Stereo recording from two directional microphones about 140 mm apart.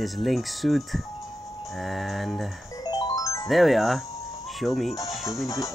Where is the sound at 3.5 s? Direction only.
Centre (ahead or behind).